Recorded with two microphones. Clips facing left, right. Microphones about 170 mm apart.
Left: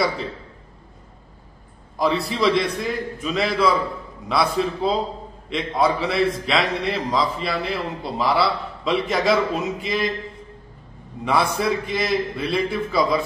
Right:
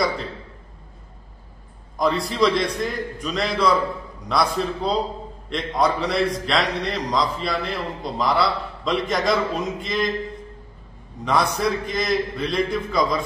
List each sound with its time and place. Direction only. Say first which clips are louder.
2.0 s a man's voice: right 1 dB; 5° left (ahead or behind)
11.2 s a man's voice: left 1 dB; 5° left (ahead or behind)